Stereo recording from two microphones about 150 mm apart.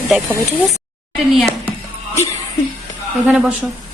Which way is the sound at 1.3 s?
Centre (ahead or behind).